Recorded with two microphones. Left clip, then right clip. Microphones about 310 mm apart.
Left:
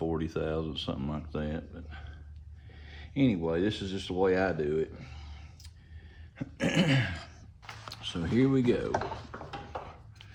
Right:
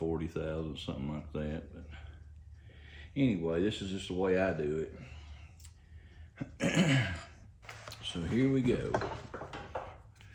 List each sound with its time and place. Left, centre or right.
0.0 s speech: centre
6.3 s cough: centre
8.0 s speech: centre